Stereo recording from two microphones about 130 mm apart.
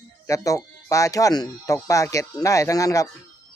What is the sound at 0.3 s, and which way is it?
Speech, 25° left (ahead or behind).